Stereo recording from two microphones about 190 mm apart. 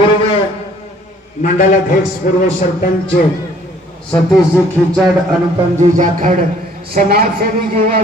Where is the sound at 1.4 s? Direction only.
40° left (ahead or behind).